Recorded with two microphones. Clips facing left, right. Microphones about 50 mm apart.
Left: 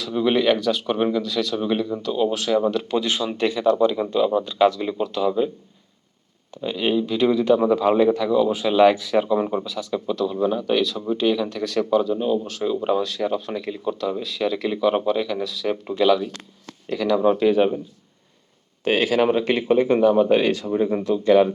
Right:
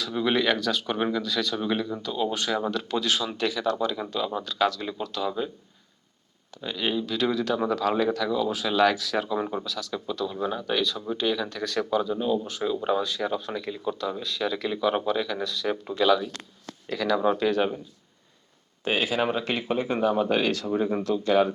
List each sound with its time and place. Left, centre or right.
0.0 s speech: centre
3.3 s speech: left; by 5.5 s centre
6.6 s speech: centre
13.0 s speech: centre
18.9 s speech: left
19.2 s speech: centre
20.7 s speech: centre
21.0 s speech: left